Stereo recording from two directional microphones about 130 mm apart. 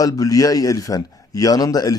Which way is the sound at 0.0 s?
25° left (ahead or behind).